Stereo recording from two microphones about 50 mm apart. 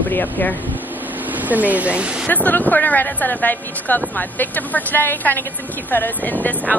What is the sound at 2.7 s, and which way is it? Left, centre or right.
Speech, left.